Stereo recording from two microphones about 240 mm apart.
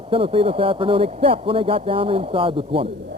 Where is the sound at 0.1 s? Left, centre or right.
Right.